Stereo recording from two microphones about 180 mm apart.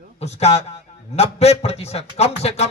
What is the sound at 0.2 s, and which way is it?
A man's voice, 35° left (ahead or behind).